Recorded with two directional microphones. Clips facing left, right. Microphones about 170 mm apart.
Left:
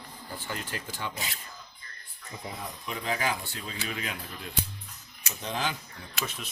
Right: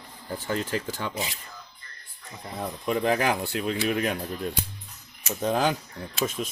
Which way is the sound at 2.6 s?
55° right (ahead or behind).